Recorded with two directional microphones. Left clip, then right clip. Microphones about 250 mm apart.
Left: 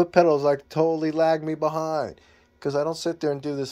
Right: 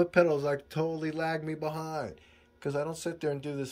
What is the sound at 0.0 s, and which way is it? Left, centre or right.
Speech, centre.